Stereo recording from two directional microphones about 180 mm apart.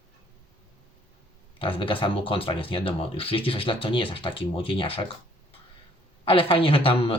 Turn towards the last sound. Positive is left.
turn(degrees=30)  # may be behind; listen again after turning